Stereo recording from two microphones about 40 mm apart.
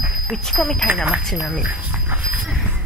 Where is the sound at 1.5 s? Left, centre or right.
Right.